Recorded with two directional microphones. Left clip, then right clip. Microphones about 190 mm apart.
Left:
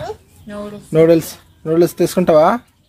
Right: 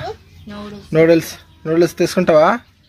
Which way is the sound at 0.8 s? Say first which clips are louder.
Left 1 dB; 10° left (ahead or behind).